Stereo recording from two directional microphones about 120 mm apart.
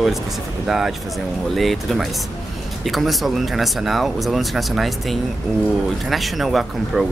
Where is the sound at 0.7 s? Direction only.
5° right (ahead or behind).